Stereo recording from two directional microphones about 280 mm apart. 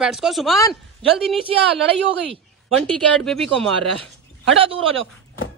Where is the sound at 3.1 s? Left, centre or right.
Centre.